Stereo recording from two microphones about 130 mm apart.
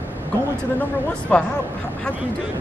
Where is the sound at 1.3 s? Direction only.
10° left (ahead or behind).